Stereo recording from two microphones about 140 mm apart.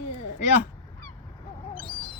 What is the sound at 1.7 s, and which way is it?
Owl, 40° left (ahead or behind).